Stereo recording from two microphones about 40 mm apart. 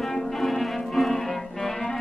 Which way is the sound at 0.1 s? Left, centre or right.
Centre.